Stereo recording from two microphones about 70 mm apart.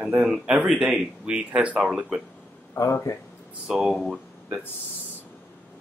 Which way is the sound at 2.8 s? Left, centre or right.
Left.